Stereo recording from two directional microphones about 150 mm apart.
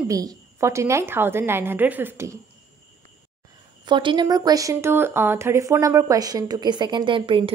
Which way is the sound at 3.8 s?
30° right (ahead or behind).